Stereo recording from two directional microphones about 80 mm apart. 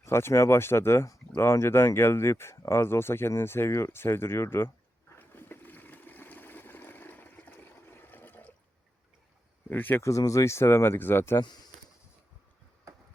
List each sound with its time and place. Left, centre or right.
0.0 s speech: left
5.1 s a sound: left
9.6 s speech: left
10.0 s speech: left
11.3 s speech: left